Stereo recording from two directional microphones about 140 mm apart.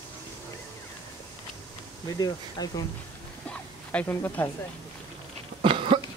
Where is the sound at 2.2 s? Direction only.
30° left (ahead or behind).